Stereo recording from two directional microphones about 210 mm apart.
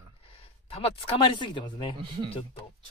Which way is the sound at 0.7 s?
25° left (ahead or behind).